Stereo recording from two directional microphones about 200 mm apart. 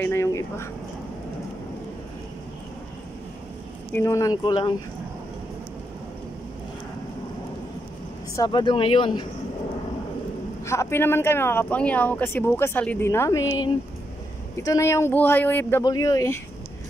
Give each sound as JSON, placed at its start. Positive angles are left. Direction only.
{"t": 0.0, "sound": "a sound", "side_deg": 15}
{"t": 3.9, "sound": "speech", "side_deg": 15}
{"t": 8.4, "sound": "speech", "side_deg": 25}
{"t": 10.6, "sound": "speech", "side_deg": 15}